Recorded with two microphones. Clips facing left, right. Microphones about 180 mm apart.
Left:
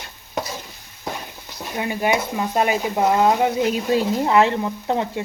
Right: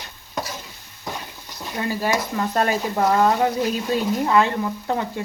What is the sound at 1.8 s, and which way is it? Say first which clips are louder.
Speech: left 2 dB; 15° left (ahead or behind).